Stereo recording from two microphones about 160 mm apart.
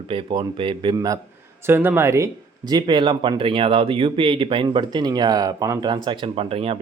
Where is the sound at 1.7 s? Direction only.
15° right (ahead or behind).